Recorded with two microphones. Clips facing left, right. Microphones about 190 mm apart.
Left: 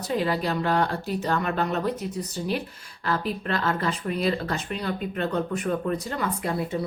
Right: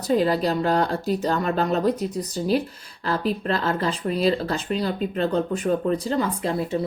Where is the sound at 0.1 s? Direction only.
35° right (ahead or behind).